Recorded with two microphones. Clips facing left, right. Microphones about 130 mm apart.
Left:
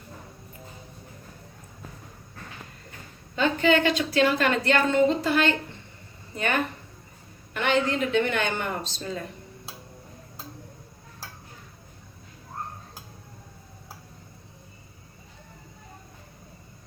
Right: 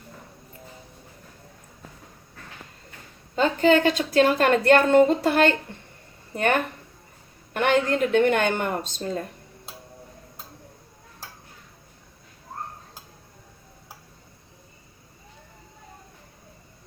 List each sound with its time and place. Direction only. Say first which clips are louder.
3.3 s a woman's voice: right 3 dB; 40° right (ahead or behind)